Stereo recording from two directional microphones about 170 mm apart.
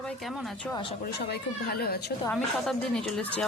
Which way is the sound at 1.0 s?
65° left (ahead or behind).